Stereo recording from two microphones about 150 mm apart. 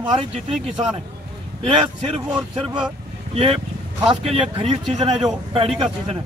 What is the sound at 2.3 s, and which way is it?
Speech, 5° right (ahead or behind).